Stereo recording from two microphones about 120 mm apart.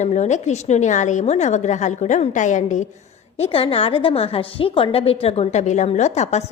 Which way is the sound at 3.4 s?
50° left (ahead or behind).